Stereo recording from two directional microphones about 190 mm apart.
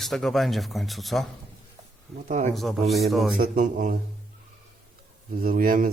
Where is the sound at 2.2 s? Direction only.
40° right (ahead or behind).